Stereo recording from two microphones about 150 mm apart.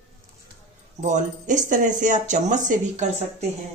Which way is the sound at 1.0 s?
55° right (ahead or behind).